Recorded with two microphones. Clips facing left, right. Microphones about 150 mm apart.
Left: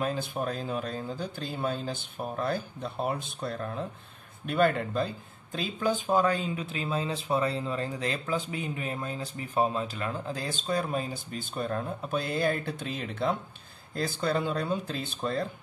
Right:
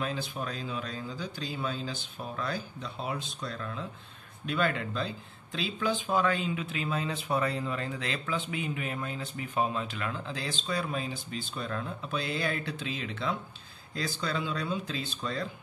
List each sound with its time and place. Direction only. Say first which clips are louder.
0.0 s a man's voice: left 4 dB; 50° left (ahead or behind)
4.5 s a man's voice: left 5 dB; 50° left (ahead or behind)